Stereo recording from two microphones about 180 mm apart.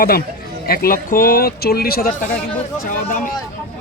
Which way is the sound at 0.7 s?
55° left (ahead or behind).